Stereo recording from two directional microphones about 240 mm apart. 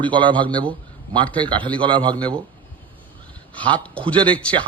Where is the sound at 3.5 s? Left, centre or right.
Right.